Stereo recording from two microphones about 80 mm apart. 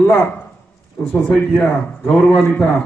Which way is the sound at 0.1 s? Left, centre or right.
Left.